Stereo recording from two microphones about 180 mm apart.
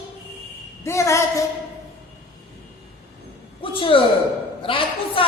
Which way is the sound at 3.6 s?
30° left (ahead or behind).